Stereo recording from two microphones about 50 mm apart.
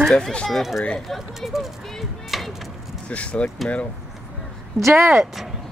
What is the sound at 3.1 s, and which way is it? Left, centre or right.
Speech, left.